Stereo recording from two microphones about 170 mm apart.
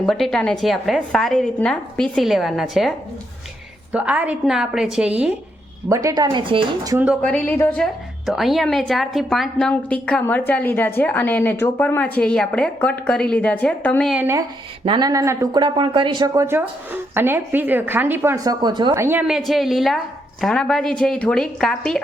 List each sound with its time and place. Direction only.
0.0 s a woman's voice: centre (ahead or behind)
3.9 s a woman's voice: 10° right (ahead or behind)
5.9 s speech: 20° right (ahead or behind)
6.9 s speech: 10° right (ahead or behind)
7.2 s a woman's voice: 10° left (ahead or behind)
8.3 s a woman's voice: centre (ahead or behind)
14.1 s speech: 15° right (ahead or behind)
14.8 s speech: 25° right (ahead or behind)
18.6 s speech: 25° right (ahead or behind)
19.0 s speech: 10° right (ahead or behind)
19.4 s a woman's voice: centre (ahead or behind)